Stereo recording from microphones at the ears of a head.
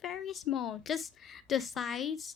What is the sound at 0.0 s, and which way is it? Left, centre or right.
A woman's voice, left.